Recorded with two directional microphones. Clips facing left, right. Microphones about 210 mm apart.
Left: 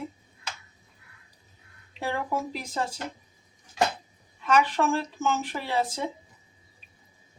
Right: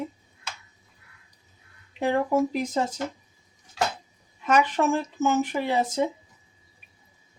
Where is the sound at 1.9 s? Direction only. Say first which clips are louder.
Right 7 dB; 15° right (ahead or behind).